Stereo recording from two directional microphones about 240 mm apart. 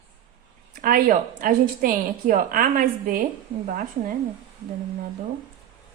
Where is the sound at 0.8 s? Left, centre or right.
Right.